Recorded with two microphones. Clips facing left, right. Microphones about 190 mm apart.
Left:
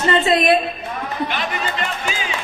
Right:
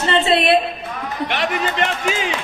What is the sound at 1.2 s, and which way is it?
A man's voice, 75° right (ahead or behind).